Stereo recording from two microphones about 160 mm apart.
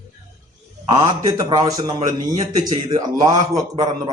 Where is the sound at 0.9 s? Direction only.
25° right (ahead or behind).